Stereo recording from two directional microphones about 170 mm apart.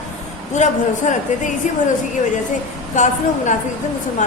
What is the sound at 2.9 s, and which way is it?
Speech, 45° left (ahead or behind).